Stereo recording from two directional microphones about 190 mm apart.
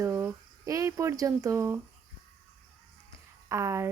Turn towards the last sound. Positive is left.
turn(degrees=-15)  # may be behind; listen again after turning